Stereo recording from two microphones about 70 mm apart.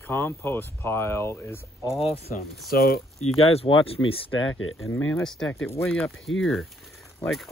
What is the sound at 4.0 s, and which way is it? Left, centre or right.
Speech, left.